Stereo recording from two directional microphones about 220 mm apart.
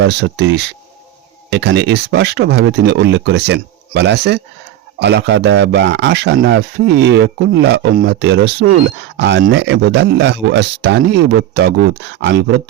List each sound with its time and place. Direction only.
0.0 s speech: 50° right (ahead or behind)